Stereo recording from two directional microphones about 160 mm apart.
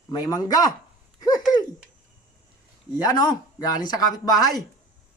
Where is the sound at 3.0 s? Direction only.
25° left (ahead or behind).